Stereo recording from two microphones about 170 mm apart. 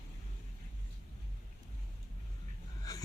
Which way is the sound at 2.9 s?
20° left (ahead or behind).